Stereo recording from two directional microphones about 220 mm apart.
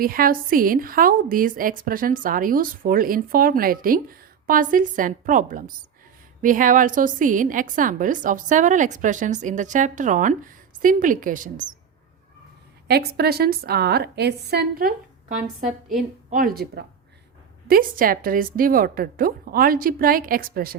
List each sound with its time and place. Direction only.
0.0 s a woman's voice: 40° right (ahead or behind)
12.9 s a woman's voice: 45° right (ahead or behind)
15.6 s a woman's voice: centre (ahead or behind)
16.3 s a woman's voice: 40° right (ahead or behind)